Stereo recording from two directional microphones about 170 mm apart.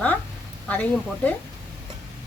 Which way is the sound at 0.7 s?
10° left (ahead or behind).